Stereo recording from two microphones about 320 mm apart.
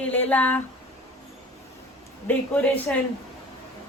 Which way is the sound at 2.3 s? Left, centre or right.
Centre.